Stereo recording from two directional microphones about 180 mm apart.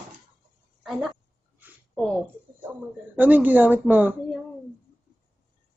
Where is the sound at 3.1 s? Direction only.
10° right (ahead or behind).